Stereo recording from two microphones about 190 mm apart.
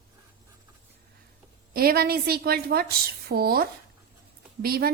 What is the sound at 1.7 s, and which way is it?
A woman's voice, 50° right (ahead or behind).